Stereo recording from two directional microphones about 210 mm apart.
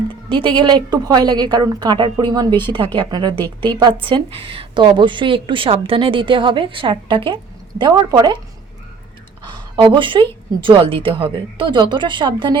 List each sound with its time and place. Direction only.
0.3 s a woman's voice: 25° right (ahead or behind)
9.5 s a woman's voice: 20° right (ahead or behind)